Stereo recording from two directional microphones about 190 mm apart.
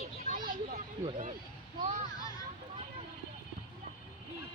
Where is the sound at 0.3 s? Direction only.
45° right (ahead or behind).